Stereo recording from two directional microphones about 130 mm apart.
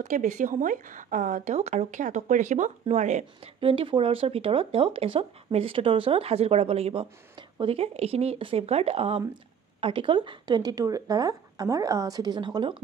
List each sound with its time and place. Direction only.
0.0 s speech: 80° right; by 3.3 s 65° right (ahead or behind)
3.6 s speech: 40° right (ahead or behind)